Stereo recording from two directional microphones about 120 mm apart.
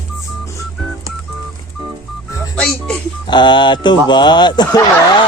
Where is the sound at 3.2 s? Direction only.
40° left (ahead or behind).